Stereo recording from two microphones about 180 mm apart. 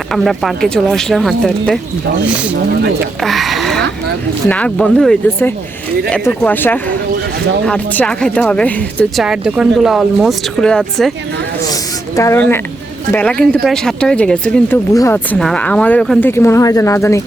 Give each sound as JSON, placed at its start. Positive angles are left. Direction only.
{"t": 0.1, "sound": "speech", "side_deg": 0}
{"t": 3.2, "sound": "speech", "side_deg": 0}
{"t": 9.2, "sound": "speech", "side_deg": -5}
{"t": 11.7, "sound": "speech", "side_deg": 20}